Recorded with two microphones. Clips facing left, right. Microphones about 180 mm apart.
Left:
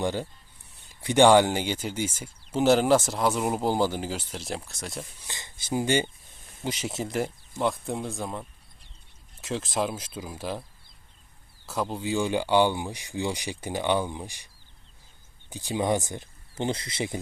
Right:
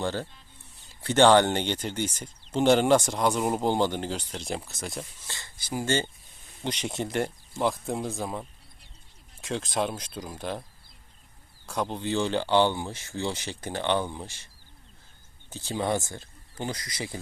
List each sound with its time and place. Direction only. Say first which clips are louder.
0.0 s speech: left 2 dB; 15° left (ahead or behind)
5.2 s speech: left 1 dB; 20° left (ahead or behind)
6.6 s speech: even; 5° left (ahead or behind)
11.6 s speech: even; 5° left (ahead or behind); by 17.2 s 25° left (ahead or behind)